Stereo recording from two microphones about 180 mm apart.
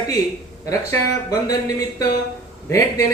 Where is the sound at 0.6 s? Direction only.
20° left (ahead or behind).